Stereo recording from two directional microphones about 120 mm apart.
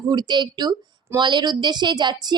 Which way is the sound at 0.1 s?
35° right (ahead or behind).